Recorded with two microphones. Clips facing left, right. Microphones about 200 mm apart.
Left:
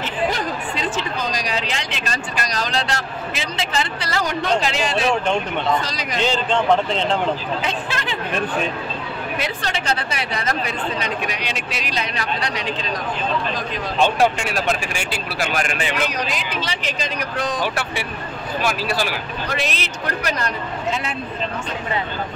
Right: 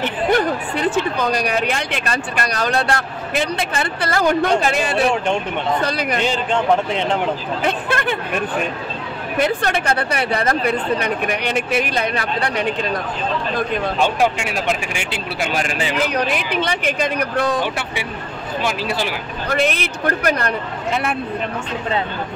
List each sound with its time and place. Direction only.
0.0 s speech: 60° right (ahead or behind)
6.2 s a man's voice: 10° right (ahead or behind)
7.6 s speech: 55° right (ahead or behind)
9.4 s speech: 55° right (ahead or behind)
14.0 s speech: 15° right (ahead or behind)
16.1 s speech: 60° right (ahead or behind)
18.6 s speech: 20° right (ahead or behind)
19.5 s speech: 55° right (ahead or behind)